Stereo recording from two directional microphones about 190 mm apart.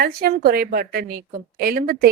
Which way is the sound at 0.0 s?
50° right (ahead or behind).